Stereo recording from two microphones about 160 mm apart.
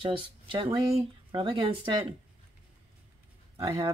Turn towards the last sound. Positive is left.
turn(degrees=-30)  # may be behind; listen again after turning